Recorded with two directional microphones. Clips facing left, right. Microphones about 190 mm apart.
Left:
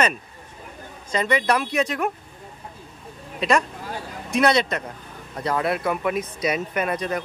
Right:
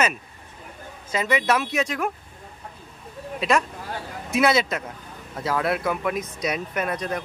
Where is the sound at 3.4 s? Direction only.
Centre (ahead or behind).